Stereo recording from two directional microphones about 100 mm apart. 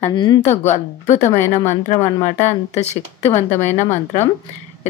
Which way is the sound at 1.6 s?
30° left (ahead or behind).